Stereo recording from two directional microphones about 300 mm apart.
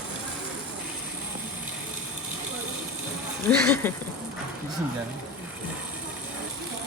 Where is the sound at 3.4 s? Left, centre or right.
Centre.